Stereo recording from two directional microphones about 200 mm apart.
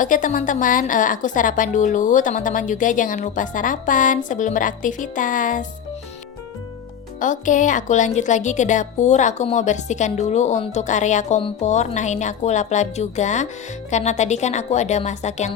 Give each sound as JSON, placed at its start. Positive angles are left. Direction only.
{"t": 0.0, "sound": "a woman's voice", "side_deg": 40}
{"t": 7.2, "sound": "a woman's voice", "side_deg": 40}